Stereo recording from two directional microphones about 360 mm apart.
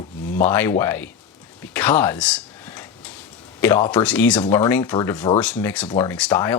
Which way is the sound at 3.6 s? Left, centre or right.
Centre.